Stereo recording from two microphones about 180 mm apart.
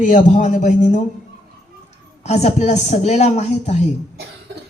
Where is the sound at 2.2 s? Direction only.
35° left (ahead or behind).